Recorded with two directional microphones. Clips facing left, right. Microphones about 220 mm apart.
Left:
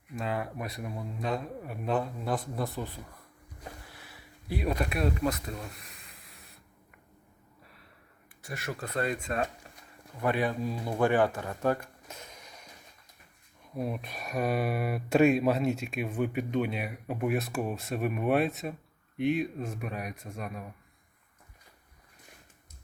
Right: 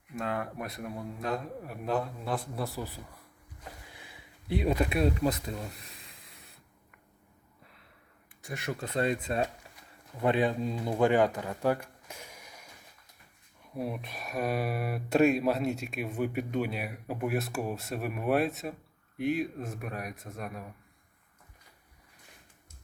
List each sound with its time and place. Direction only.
0.2 s speech: centre (ahead or behind); by 6.0 s 30° right (ahead or behind)
8.4 s speech: 15° right (ahead or behind); by 9.4 s 35° right (ahead or behind)
10.2 s speech: 20° right (ahead or behind)
11.3 s a sound: 15° right (ahead or behind)
13.7 s speech: centre (ahead or behind)